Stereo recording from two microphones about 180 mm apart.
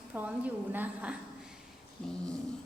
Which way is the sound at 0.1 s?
10° right (ahead or behind).